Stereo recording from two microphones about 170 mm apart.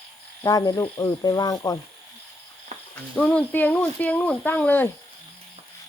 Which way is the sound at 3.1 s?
5° left (ahead or behind).